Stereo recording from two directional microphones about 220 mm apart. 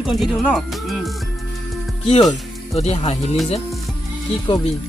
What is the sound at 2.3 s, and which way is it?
Speech, 30° left (ahead or behind).